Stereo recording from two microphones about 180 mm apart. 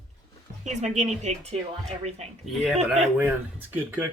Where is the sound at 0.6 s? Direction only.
40° right (ahead or behind).